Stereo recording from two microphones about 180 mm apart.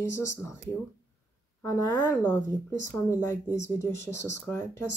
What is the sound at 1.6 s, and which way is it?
Speech, 15° left (ahead or behind).